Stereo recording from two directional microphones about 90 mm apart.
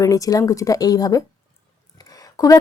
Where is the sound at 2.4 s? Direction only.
40° left (ahead or behind).